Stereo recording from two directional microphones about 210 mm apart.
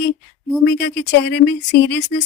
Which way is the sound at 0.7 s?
55° left (ahead or behind).